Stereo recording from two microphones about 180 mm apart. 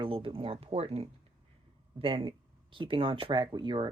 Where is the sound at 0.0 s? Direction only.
30° right (ahead or behind).